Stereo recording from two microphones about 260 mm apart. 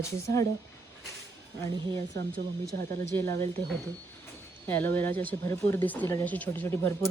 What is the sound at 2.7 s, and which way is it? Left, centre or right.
Speech, right.